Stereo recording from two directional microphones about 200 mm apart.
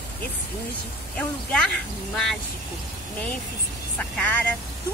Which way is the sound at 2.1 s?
5° left (ahead or behind).